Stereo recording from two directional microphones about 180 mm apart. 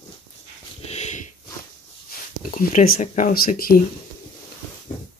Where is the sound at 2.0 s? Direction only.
45° left (ahead or behind).